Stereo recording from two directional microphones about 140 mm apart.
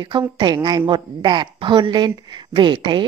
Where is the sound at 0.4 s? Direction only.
30° right (ahead or behind).